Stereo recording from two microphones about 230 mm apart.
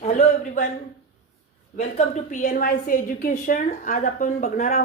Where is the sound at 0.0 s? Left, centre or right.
Left.